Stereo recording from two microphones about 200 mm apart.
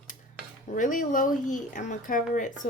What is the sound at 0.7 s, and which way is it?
Speech, 40° left (ahead or behind).